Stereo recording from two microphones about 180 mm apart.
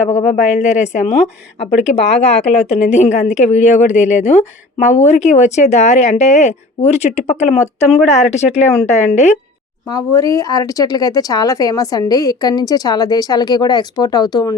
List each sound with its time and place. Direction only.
0.2 s a woman's voice: 40° left (ahead or behind)
9.9 s speech: 20° left (ahead or behind)